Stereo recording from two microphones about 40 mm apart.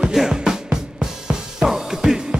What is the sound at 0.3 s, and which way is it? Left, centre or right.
Music, centre.